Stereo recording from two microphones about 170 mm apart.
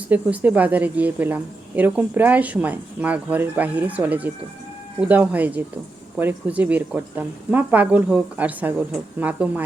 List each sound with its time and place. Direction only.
0.1 s a woman's voice: 10° right (ahead or behind)